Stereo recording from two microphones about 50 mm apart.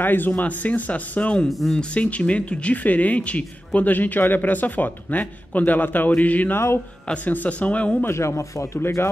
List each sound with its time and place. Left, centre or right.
0.0 s speech: left
1.6 s speech: centre
2.0 s speech: left
6.5 s a man's voice: left
7.2 s speech: left
8.1 s speech: left